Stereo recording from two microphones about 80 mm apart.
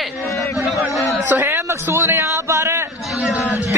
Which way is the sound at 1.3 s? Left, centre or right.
Right.